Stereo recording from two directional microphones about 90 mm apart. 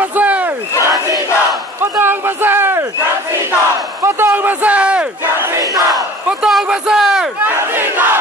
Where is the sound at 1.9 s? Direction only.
25° right (ahead or behind).